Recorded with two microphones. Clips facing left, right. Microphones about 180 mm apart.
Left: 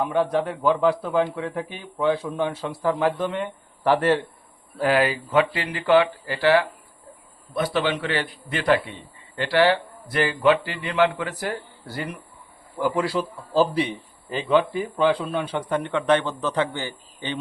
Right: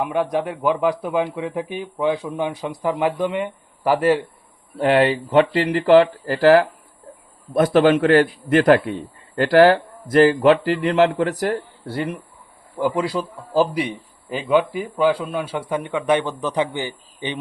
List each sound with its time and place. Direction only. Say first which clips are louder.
0.0 s a man's voice: right 1 dB; 15° right (ahead or behind)
4.8 s a man's voice: right 4 dB; 25° right (ahead or behind)